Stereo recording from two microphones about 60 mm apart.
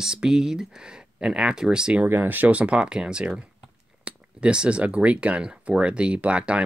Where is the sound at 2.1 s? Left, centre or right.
Right.